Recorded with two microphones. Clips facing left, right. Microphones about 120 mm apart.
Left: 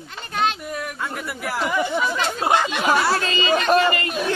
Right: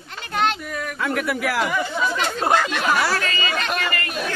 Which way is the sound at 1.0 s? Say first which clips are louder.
Right 6 dB; 90° right.